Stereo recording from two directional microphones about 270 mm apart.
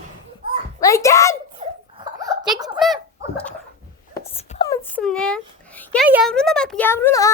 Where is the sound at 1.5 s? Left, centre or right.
Centre.